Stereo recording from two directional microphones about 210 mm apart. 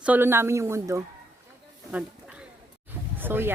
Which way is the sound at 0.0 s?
10° right (ahead or behind).